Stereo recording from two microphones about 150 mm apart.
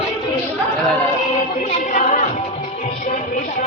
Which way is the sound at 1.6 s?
50° left (ahead or behind).